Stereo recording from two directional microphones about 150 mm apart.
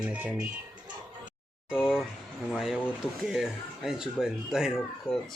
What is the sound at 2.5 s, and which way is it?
Speech, centre (ahead or behind).